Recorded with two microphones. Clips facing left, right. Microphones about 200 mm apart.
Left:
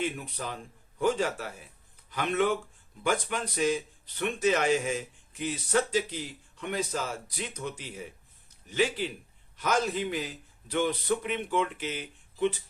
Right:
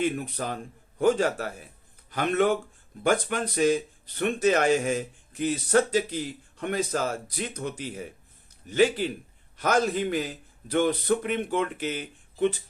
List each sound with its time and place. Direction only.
0.0 s speech: 55° right (ahead or behind)